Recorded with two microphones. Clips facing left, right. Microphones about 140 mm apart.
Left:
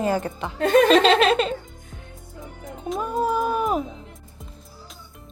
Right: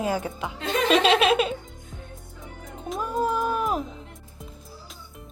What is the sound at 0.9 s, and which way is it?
Giggle, 5° right (ahead or behind).